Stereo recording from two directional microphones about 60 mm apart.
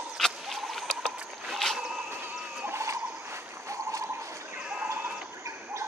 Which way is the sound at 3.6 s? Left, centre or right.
Right.